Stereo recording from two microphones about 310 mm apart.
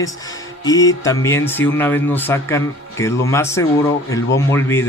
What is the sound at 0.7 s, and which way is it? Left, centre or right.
Speech, centre.